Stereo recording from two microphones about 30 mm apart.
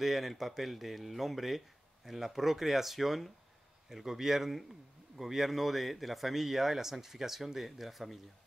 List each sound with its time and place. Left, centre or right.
0.0 s speech: centre